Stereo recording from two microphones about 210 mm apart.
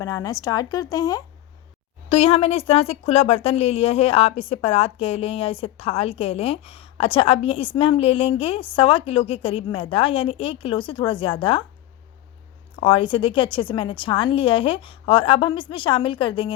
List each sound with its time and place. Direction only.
0.0 s speech: 15° left (ahead or behind)
2.0 s speech: 30° left (ahead or behind)
12.7 s speech: 25° left (ahead or behind)